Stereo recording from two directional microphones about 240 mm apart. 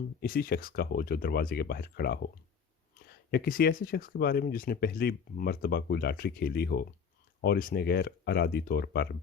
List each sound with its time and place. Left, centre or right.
0.2 s speech: left